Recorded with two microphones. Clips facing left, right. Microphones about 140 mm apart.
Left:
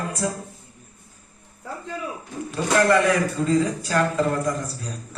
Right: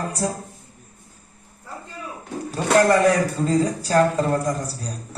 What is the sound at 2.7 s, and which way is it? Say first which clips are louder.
A man's voice: right 2 dB; 35° right (ahead or behind).